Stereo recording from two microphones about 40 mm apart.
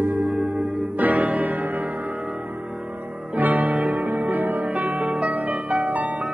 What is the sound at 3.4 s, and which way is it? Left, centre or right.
Music, right.